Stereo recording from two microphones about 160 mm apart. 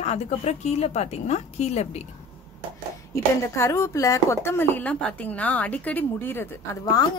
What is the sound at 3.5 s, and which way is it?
Speech, 15° left (ahead or behind).